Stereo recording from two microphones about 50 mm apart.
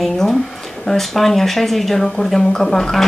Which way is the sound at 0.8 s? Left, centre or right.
Centre.